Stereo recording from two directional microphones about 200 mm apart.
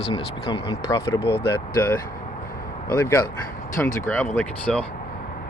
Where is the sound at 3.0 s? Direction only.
15° left (ahead or behind).